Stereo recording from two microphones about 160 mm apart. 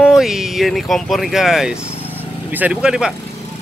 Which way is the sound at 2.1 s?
10° right (ahead or behind).